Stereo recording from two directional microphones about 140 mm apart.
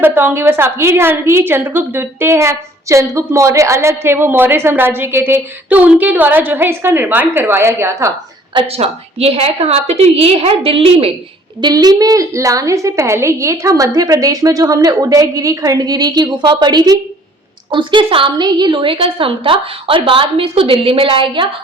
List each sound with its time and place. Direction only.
0.0 s a woman's voice: 15° right (ahead or behind)
8.5 s a woman's voice: 45° right (ahead or behind)
11.6 s a woman's voice: 30° right (ahead or behind)